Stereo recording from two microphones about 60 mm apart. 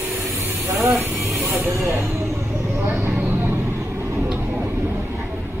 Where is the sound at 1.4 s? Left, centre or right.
Right.